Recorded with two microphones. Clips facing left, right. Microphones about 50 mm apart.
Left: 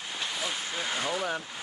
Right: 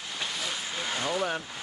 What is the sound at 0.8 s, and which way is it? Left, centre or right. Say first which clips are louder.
Speech: right 2 dB; centre.